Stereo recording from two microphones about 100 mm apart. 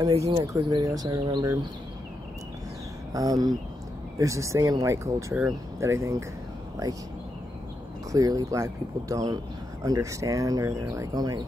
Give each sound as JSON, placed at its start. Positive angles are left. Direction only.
{"t": 0.3, "sound": "speech", "side_deg": -40}
{"t": 3.1, "sound": "speech", "side_deg": -35}
{"t": 8.1, "sound": "speech", "side_deg": -35}